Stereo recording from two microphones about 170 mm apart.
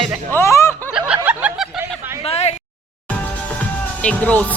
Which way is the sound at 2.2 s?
35° left (ahead or behind).